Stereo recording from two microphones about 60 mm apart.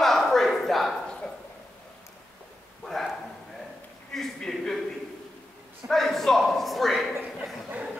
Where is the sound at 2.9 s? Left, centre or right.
Centre.